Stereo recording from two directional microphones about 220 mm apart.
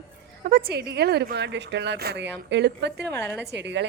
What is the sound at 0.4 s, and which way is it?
A woman's voice, 45° right (ahead or behind).